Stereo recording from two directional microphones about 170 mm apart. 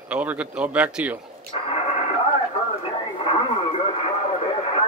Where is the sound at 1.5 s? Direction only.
35° left (ahead or behind).